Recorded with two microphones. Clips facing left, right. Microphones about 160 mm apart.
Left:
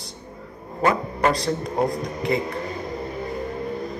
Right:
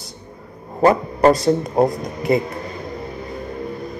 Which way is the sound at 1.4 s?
25° right (ahead or behind).